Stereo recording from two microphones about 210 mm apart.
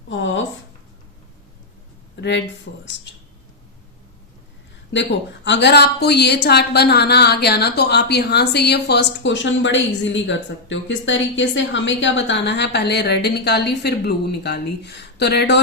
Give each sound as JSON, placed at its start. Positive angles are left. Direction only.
{"t": 0.1, "sound": "a sound", "side_deg": 65}
{"t": 2.7, "sound": "speech", "side_deg": 55}
{"t": 4.9, "sound": "a woman's voice", "side_deg": 60}